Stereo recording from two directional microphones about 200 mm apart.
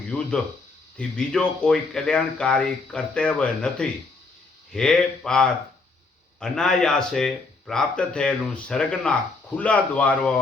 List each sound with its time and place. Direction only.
0.1 s a man's voice: 5° left (ahead or behind)